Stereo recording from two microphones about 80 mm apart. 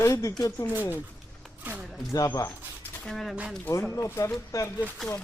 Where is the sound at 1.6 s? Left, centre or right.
Right.